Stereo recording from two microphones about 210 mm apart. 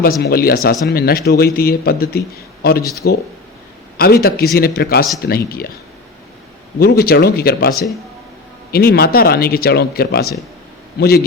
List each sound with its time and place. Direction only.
0.0 s a man's voice: 45° left (ahead or behind)
6.7 s a man's voice: 45° left (ahead or behind)